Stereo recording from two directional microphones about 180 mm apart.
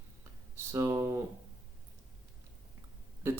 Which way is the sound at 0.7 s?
15° right (ahead or behind).